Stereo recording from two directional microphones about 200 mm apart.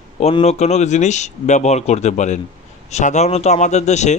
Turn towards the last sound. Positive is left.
turn(degrees=35)  # may be behind; listen again after turning